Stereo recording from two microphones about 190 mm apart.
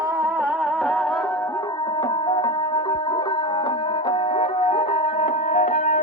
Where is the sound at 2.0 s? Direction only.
15° left (ahead or behind).